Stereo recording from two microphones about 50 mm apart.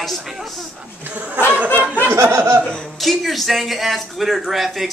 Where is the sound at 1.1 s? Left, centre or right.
Right.